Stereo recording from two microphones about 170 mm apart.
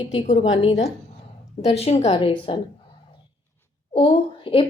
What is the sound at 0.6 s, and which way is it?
A woman's voice, 40° left (ahead or behind).